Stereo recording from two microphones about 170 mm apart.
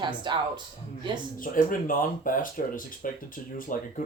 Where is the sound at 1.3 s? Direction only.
55° left (ahead or behind).